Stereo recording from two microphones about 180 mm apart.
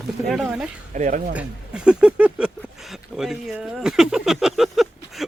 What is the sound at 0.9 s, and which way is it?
Speech, 45° right (ahead or behind).